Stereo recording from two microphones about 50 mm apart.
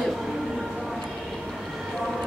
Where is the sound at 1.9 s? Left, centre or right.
Centre.